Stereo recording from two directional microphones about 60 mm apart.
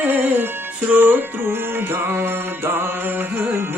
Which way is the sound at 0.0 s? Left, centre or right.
Right.